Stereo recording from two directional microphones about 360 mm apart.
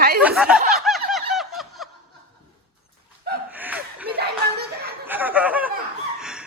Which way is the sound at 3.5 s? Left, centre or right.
Centre.